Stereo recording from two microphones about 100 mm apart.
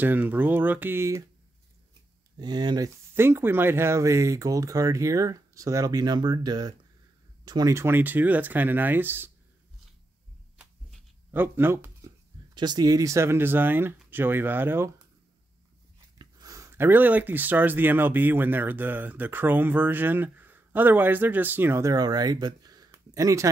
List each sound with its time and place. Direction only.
0.0 s speech: 20° right (ahead or behind)
2.3 s speech: 45° right (ahead or behind)
3.2 s speech: 25° right (ahead or behind); by 7.7 s 45° right (ahead or behind)
7.7 s speech: 25° right (ahead or behind)
11.3 s speech: 20° right (ahead or behind)
12.5 s speech: 45° right (ahead or behind); by 14.9 s 20° right (ahead or behind)
16.2 s speech: 40° right (ahead or behind)